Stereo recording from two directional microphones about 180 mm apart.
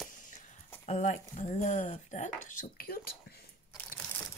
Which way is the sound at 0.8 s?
40° left (ahead or behind).